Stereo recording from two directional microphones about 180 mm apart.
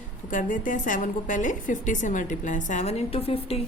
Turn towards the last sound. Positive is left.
turn(degrees=35)  # may be behind; listen again after turning